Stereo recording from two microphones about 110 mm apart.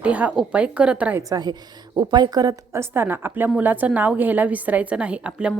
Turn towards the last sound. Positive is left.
turn(degrees=-10)  # may be behind; listen again after turning